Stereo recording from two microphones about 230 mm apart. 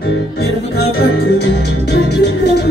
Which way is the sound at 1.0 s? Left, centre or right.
Left.